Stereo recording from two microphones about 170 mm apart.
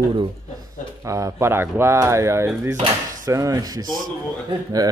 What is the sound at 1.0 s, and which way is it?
Speech, 20° right (ahead or behind).